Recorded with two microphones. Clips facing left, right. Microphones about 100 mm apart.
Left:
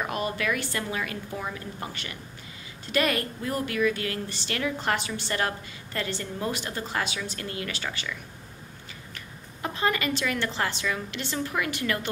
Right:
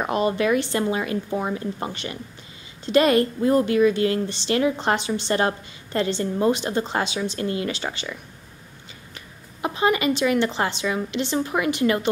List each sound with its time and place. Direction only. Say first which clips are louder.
0.0 s a woman's voice: right 7 dB; 25° right (ahead or behind)
9.6 s a woman's voice: right 6 dB; 20° right (ahead or behind)